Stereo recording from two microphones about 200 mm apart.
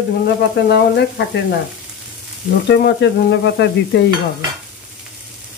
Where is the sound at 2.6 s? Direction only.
55° left (ahead or behind).